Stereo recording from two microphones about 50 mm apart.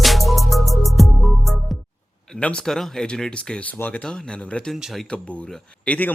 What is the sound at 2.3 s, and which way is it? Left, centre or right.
Speech, centre.